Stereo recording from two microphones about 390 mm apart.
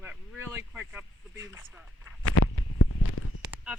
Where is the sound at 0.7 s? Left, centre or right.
Centre.